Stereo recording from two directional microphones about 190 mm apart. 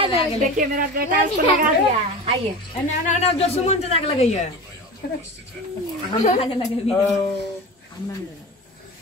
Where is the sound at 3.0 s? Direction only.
35° left (ahead or behind).